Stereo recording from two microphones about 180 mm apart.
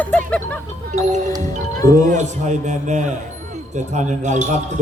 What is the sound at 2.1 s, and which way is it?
A man's voice, 40° right (ahead or behind).